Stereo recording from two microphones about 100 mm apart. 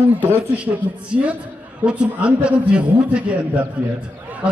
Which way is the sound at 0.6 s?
10° right (ahead or behind).